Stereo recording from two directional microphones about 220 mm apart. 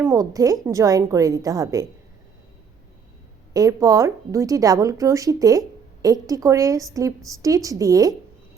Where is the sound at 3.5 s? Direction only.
15° right (ahead or behind).